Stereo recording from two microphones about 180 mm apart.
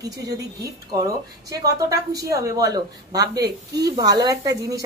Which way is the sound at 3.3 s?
70° right (ahead or behind).